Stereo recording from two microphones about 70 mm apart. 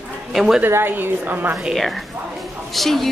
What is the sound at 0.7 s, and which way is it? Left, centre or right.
Speech, right.